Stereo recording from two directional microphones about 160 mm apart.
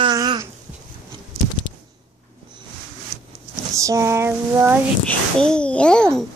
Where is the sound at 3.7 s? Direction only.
20° right (ahead or behind).